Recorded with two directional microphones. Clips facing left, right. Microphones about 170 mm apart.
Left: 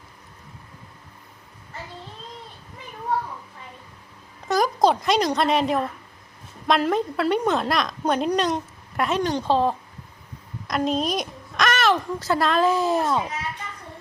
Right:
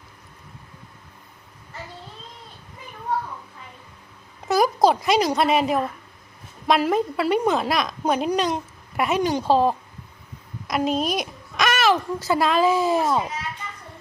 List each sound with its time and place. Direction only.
4.4 s a woman's voice: 5° right (ahead or behind)